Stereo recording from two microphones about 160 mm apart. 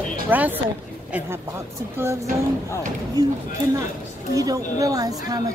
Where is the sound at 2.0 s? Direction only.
15° right (ahead or behind).